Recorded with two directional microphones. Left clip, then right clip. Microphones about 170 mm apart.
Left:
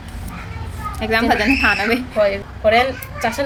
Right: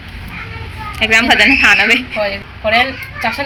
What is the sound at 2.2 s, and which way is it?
A woman's voice, 25° left (ahead or behind).